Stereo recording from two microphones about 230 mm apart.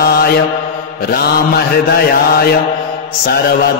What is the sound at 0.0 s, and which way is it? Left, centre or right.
Mantra, left.